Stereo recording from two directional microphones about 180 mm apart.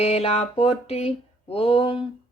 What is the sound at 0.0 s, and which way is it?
Speech, 35° left (ahead or behind).